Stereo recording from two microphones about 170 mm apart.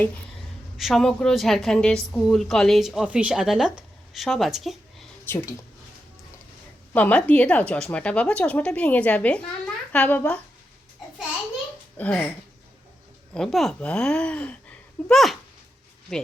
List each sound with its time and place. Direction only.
0.8 s a woman's voice: centre (ahead or behind)
5.2 s speech: 15° left (ahead or behind)
6.9 s speech: 10° left (ahead or behind)
11.9 s speech: 5° left (ahead or behind)
13.3 s a woman's voice: centre (ahead or behind)